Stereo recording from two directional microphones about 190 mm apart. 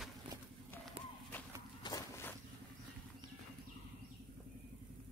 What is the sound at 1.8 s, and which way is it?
Walk, 15° left (ahead or behind).